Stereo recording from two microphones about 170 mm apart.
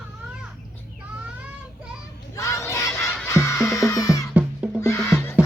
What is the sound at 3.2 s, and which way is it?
Music, 15° left (ahead or behind).